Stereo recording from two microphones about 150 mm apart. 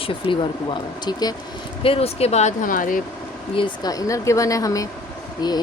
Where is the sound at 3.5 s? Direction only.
30° left (ahead or behind).